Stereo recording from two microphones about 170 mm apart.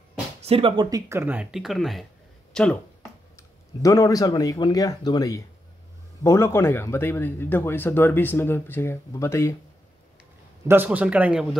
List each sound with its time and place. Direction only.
0.5 s speech: 30° right (ahead or behind); by 2.8 s 5° left (ahead or behind)
3.3 s speech: 20° left (ahead or behind)
10.7 s speech: 10° right (ahead or behind)